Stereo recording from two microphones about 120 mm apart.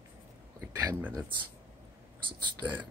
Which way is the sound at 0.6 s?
25° right (ahead or behind).